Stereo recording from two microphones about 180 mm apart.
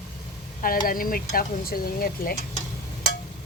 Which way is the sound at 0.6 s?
50° left (ahead or behind).